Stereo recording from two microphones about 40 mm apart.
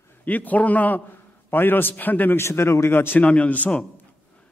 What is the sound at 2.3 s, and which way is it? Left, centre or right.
Speech, left.